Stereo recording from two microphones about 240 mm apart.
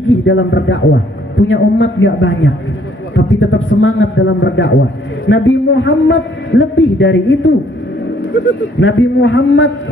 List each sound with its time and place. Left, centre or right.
0.2 s a man's voice: left